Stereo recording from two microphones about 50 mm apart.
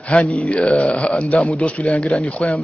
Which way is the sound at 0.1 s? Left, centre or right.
Left.